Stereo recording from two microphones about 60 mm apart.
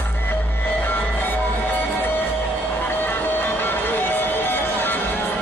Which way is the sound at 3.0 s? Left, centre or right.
Left.